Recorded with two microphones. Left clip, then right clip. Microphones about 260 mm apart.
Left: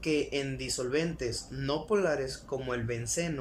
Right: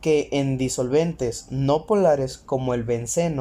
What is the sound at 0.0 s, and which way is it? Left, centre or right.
Speech, right.